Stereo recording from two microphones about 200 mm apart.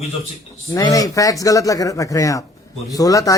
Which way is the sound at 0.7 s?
15° left (ahead or behind).